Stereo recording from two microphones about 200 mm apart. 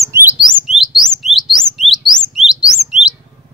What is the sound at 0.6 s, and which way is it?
Bird, centre (ahead or behind).